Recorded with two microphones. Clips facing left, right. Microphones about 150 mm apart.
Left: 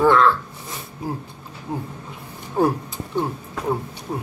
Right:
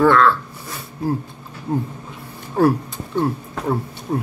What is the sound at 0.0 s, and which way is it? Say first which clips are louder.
Speech: right 2 dB; 20° left (ahead or behind).